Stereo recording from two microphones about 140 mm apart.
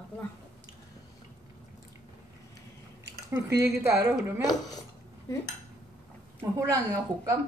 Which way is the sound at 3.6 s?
15° right (ahead or behind).